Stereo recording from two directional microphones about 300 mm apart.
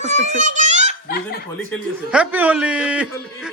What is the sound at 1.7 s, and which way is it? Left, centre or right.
A man's voice, centre.